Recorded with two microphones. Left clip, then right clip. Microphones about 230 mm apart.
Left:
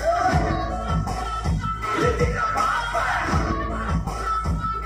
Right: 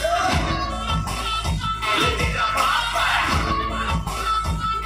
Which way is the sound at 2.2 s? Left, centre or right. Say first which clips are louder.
Right 1 dB; right.